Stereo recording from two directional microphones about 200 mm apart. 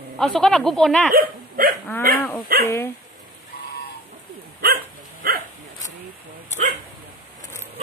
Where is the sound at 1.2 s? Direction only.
45° right (ahead or behind).